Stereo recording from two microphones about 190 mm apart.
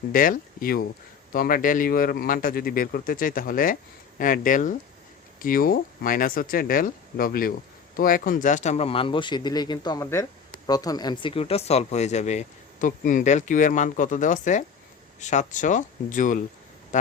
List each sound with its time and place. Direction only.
0.1 s speech: 45° left (ahead or behind)